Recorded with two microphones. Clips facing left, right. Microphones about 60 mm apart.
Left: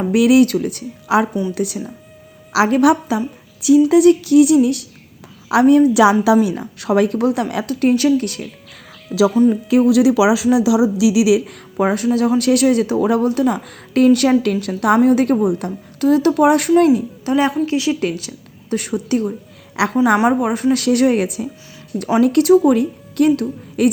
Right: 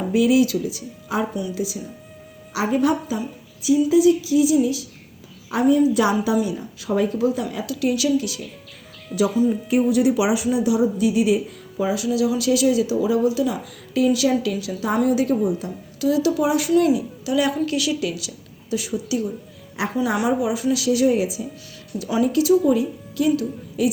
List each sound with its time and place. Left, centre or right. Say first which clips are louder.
0.1 s speech: left 5 dB; left
2.5 s speech: left 7 dB; left
5.5 s a woman's voice: left 6 dB; left
7.7 s a woman's voice: left 6 dB; left
9.1 s speech: left 6 dB; left
11.9 s speech: left 5 dB; left
16.7 s speech: left 5 dB; left
18.0 s a woman's voice: left 5 dB; left
19.8 s speech: left 7 dB; left
20.2 s speech: left 5 dB; left